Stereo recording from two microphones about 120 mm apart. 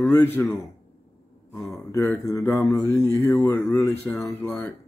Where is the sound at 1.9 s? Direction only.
25° left (ahead or behind).